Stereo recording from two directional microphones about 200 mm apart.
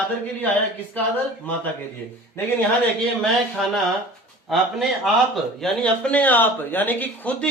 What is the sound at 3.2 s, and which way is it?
Speech, centre (ahead or behind).